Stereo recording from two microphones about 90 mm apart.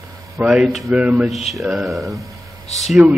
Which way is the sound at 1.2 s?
Centre (ahead or behind).